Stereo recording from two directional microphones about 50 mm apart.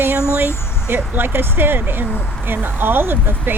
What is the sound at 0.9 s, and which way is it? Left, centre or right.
Speech, right.